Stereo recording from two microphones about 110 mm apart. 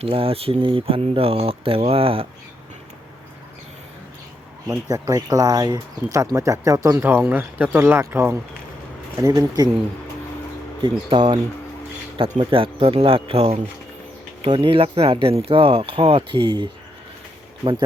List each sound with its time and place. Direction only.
0.0 s speech: 55° right (ahead or behind)
4.9 s speech: 30° right (ahead or behind)
9.1 s speech: 35° right (ahead or behind)
10.8 s speech: 50° right (ahead or behind)
12.4 s speech: 50° right (ahead or behind)